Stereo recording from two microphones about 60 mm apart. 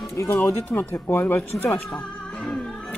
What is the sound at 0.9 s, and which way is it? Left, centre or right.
Speech, left.